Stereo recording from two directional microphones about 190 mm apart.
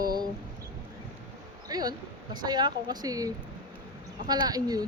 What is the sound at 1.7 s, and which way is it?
Speech, 20° right (ahead or behind).